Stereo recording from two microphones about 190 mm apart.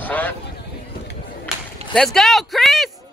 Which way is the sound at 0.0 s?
10° left (ahead or behind).